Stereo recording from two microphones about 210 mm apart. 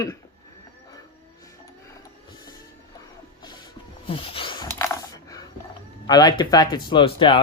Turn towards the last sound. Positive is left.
turn(degrees=25)  # may be behind; listen again after turning